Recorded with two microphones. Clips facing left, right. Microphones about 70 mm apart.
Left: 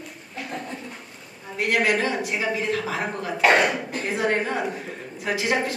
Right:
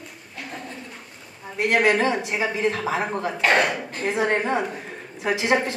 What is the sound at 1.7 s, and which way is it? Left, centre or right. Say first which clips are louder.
A woman's voice: right 3 dB; centre.